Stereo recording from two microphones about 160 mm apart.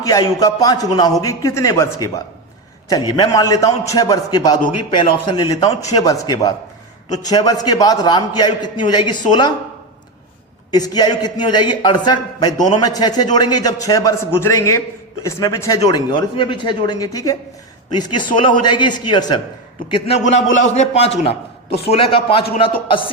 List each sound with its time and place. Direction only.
0.0 s a man's voice: 20° left (ahead or behind)
10.7 s a man's voice: 25° left (ahead or behind)
19.9 s a man's voice: 40° left (ahead or behind)